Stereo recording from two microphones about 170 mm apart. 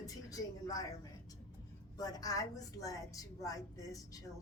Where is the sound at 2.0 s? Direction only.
20° left (ahead or behind).